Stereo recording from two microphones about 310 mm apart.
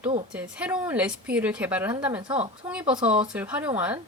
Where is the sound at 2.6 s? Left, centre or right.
Centre.